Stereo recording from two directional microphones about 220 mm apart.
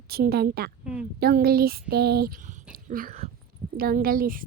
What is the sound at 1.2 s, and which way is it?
Speech, 45° right (ahead or behind).